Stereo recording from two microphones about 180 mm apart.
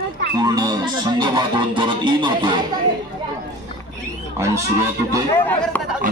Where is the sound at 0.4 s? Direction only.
25° right (ahead or behind).